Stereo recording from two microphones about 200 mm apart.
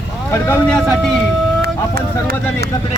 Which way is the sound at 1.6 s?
55° right (ahead or behind).